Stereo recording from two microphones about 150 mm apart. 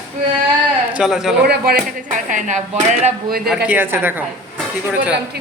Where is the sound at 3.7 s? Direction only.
15° right (ahead or behind).